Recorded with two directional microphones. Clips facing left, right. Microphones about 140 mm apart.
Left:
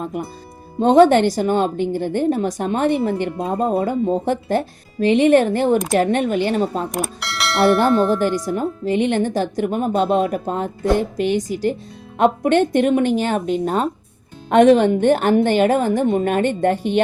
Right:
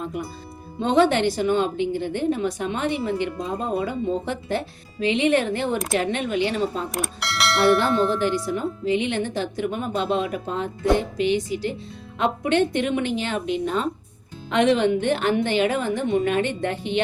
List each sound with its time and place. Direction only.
0.0 s speech: 45° left (ahead or behind)
6.9 s bell: centre (ahead or behind)
7.9 s tubular bells: centre (ahead or behind)
8.4 s speech: 45° left (ahead or behind)